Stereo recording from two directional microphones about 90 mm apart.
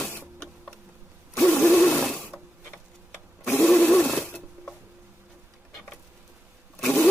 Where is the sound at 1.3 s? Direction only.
15° left (ahead or behind).